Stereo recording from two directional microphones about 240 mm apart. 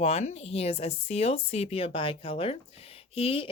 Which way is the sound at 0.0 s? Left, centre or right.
Left.